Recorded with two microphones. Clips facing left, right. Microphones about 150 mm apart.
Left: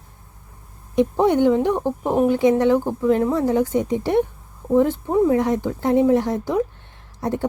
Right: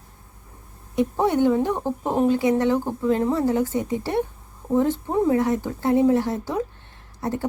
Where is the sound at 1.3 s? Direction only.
20° left (ahead or behind).